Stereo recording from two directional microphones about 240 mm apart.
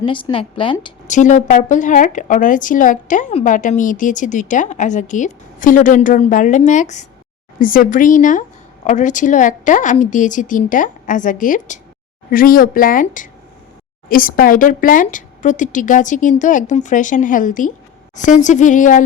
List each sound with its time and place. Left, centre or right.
0.0 s speech: left
1.0 s a woman's voice: left